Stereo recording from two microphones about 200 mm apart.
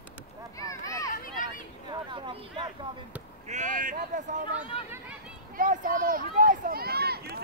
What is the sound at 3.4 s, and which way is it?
Speech, 40° right (ahead or behind).